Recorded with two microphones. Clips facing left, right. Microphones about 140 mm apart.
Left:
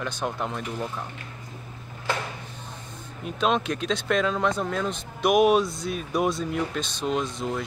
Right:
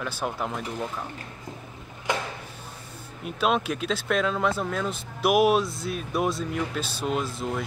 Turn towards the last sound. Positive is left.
turn(degrees=-5)  # may be behind; listen again after turning